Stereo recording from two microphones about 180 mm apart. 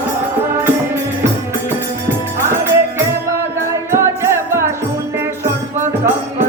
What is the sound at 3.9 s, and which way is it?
Music, 15° right (ahead or behind).